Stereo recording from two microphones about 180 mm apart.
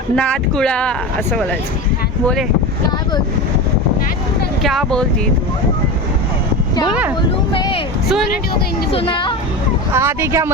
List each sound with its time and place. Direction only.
0.2 s speech: 5° left (ahead or behind)
4.6 s speech: centre (ahead or behind)
6.8 s speech: 5° right (ahead or behind)
7.2 s speech: 25° left (ahead or behind)
8.9 s speech: 30° left (ahead or behind)
9.9 s speech: 15° right (ahead or behind)